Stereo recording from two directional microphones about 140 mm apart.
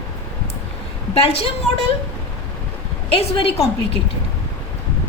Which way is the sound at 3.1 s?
45° left (ahead or behind).